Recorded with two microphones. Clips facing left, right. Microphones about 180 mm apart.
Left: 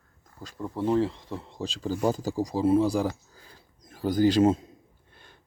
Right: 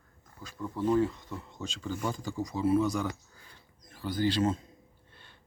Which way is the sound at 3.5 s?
45° left (ahead or behind).